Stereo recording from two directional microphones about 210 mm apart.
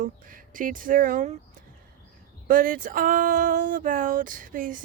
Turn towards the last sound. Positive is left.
turn(degrees=-40)  # may be behind; listen again after turning